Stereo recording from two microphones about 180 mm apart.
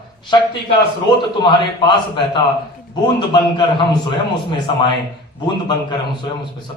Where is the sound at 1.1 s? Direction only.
25° left (ahead or behind).